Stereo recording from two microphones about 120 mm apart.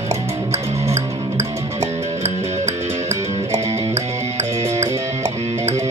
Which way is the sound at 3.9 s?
70° right (ahead or behind).